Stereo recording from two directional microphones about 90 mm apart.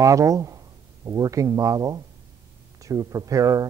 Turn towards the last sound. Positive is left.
turn(degrees=-40)  # may be behind; listen again after turning